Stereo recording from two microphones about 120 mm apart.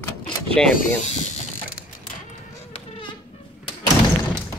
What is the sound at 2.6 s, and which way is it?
Insect, 55° left (ahead or behind).